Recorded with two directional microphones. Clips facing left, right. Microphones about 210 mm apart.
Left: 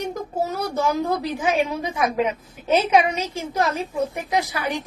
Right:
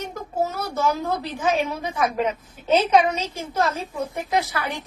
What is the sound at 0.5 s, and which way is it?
A woman's voice, 15° left (ahead or behind).